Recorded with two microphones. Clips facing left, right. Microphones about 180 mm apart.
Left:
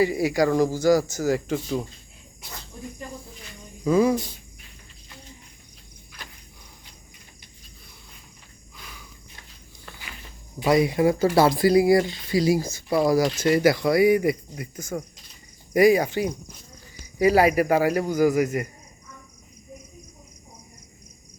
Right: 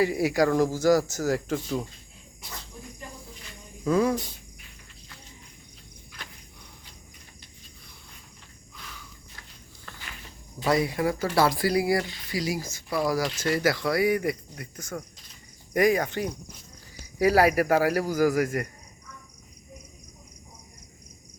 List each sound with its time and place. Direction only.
0.0 s speech: centre (ahead or behind)
3.8 s speech: 5° left (ahead or behind)
8.8 s cricket: 15° left (ahead or behind)
10.6 s speech: 15° left (ahead or behind)